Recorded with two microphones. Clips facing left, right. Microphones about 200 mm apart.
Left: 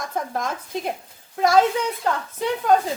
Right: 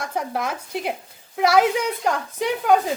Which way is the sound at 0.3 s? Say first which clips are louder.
Right 1 dB; 10° right (ahead or behind).